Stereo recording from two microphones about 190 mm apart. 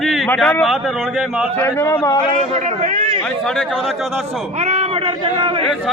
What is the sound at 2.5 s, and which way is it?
Speech, 35° right (ahead or behind).